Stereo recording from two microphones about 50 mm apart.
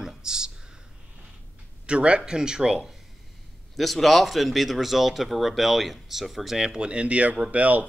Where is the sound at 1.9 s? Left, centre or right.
Right.